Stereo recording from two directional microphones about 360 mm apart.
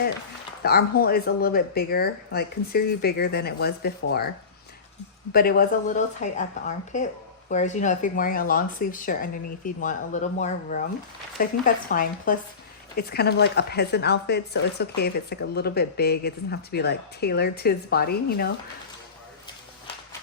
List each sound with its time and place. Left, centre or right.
0.6 s speech: left
5.3 s speech: left